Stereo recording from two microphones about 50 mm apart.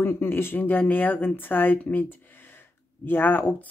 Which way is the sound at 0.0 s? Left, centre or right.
Left.